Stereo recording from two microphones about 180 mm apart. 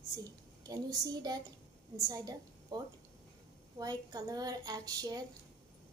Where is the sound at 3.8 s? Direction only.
20° right (ahead or behind).